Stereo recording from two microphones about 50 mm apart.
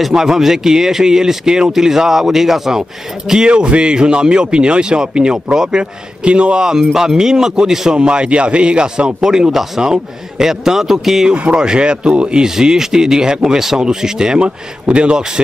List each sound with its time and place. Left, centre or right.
0.0 s speech: centre
3.4 s speech: right
11.3 s speech: right